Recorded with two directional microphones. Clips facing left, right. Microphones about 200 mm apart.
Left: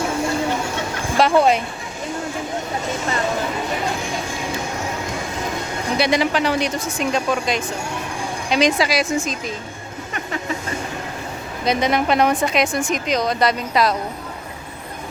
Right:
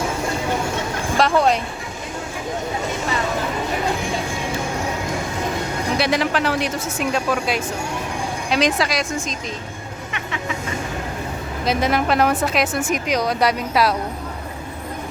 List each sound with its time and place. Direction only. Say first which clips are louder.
1.1 s speech: left 2 dB; centre (ahead or behind)
6.0 s a woman's voice: left 3 dB; centre (ahead or behind)
10.1 s music: left 3 dB; 40° left (ahead or behind)
11.6 s a woman's voice: left 1 dB; 5° right (ahead or behind)